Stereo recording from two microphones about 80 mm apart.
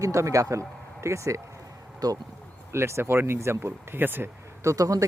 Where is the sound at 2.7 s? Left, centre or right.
Right.